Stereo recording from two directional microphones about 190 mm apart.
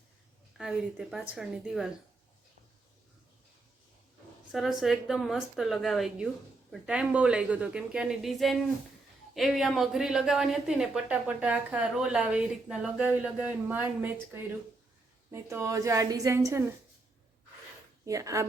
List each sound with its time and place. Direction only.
0.5 s a woman's voice: 5° right (ahead or behind)
4.5 s a woman's voice: centre (ahead or behind)
15.3 s a woman's voice: 15° right (ahead or behind)
18.0 s speech: 15° right (ahead or behind)